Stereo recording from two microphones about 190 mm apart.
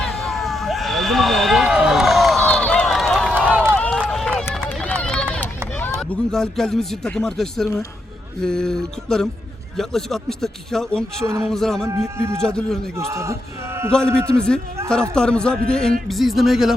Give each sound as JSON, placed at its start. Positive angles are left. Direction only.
{"t": 0.0, "sound": "a sound", "side_deg": 0}
{"t": 3.3, "sound": "run", "side_deg": -10}
{"t": 3.8, "sound": "run", "side_deg": 5}
{"t": 6.0, "sound": "speech", "side_deg": 0}
{"t": 11.9, "sound": "a man's voice", "side_deg": -15}
{"t": 12.5, "sound": "speech", "side_deg": 5}
{"t": 13.0, "sound": "a man's voice", "side_deg": -15}
{"t": 13.9, "sound": "speech", "side_deg": 5}